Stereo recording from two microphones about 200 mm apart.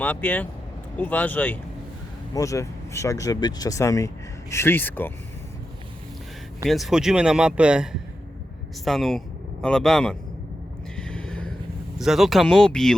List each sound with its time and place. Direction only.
0.0 s speech: 10° left (ahead or behind)
6.7 s speech: centre (ahead or behind)
10.9 s a sound: 5° left (ahead or behind)
11.9 s speech: centre (ahead or behind)